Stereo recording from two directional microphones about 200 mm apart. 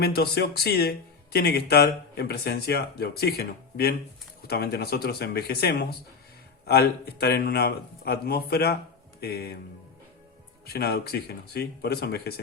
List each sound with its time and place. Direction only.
0.0 s speech: 50° left (ahead or behind)
10.7 s speech: 50° left (ahead or behind)